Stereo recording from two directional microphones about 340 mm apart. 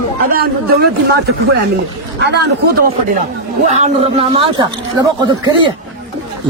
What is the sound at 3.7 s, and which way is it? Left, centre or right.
Speech, centre.